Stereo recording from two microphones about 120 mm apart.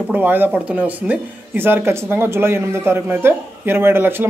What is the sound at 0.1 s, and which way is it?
Speech, 15° right (ahead or behind).